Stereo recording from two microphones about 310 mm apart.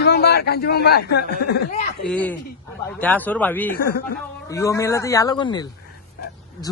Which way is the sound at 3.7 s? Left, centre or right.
Left.